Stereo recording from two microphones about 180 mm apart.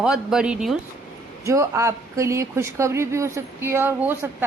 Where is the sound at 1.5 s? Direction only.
15° right (ahead or behind).